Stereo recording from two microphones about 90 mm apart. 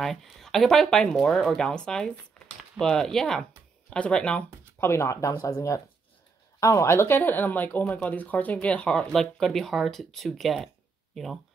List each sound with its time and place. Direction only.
0.0 s speech: 5° left (ahead or behind)
4.7 s speech: 30° left (ahead or behind); by 11.3 s centre (ahead or behind)